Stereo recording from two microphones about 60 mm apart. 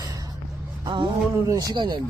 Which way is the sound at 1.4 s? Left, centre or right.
Right.